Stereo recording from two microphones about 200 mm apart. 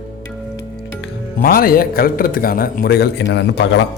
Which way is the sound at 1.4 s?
45° left (ahead or behind).